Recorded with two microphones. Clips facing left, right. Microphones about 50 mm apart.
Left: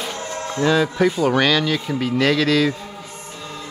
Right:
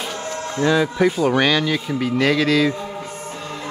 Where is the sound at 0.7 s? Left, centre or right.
Centre.